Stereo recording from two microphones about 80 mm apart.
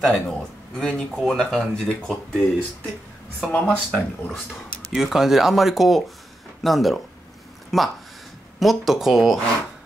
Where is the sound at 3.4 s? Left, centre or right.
Centre.